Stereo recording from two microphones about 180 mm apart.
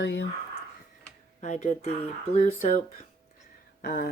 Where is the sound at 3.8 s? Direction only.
60° left (ahead or behind).